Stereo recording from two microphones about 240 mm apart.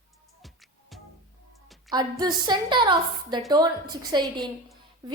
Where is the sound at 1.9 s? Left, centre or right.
Centre.